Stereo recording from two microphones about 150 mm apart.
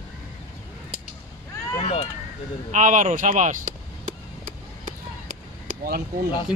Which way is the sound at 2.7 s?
55° right (ahead or behind).